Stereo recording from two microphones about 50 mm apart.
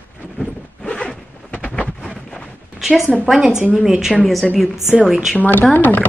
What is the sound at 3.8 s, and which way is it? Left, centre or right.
Speech, centre.